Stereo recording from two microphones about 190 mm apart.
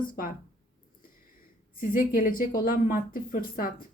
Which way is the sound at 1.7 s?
45° left (ahead or behind).